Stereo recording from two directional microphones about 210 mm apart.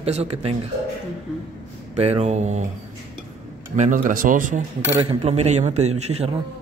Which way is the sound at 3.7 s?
35° right (ahead or behind).